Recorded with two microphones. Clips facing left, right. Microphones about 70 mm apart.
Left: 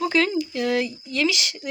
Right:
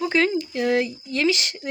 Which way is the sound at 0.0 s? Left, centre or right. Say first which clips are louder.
Even; right.